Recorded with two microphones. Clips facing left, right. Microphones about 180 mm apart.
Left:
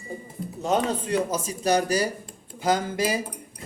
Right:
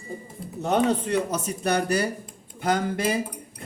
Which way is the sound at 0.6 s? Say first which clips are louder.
Right 2 dB; 65° right (ahead or behind).